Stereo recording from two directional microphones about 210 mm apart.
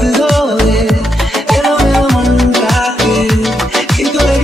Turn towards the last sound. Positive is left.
turn(degrees=0)  # may be behind; listen again after turning